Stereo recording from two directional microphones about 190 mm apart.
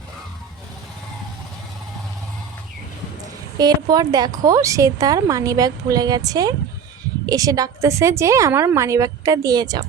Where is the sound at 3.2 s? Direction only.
20° right (ahead or behind).